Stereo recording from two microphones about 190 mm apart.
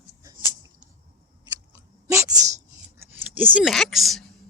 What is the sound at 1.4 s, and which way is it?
Chewing, 20° right (ahead or behind).